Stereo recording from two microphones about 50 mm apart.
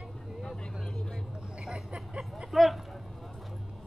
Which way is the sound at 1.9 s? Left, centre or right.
Centre.